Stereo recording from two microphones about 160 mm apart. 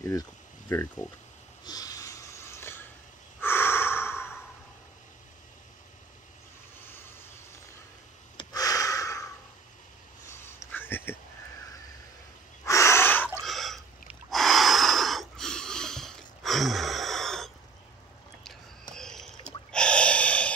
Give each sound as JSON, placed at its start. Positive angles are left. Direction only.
{"t": 0.7, "sound": "speech", "side_deg": 10}
{"t": 1.6, "sound": "wheeze", "side_deg": 25}
{"t": 3.3, "sound": "snort", "side_deg": 15}
{"t": 8.4, "sound": "gasp", "side_deg": 20}
{"t": 10.4, "sound": "a sound", "side_deg": 15}
{"t": 12.6, "sound": "a sound", "side_deg": 20}
{"t": 13.4, "sound": "gasp", "side_deg": 0}
{"t": 18.9, "sound": "rowboat", "side_deg": 5}
{"t": 19.7, "sound": "gasp", "side_deg": 5}